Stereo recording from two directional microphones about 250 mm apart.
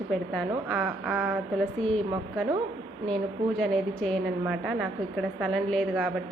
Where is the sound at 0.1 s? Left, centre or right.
Centre.